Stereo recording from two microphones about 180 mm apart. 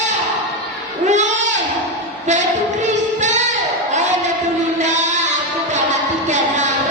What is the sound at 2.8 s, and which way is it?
Singing, 40° right (ahead or behind).